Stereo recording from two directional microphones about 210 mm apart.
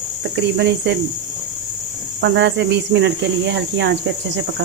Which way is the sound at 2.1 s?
55° right (ahead or behind).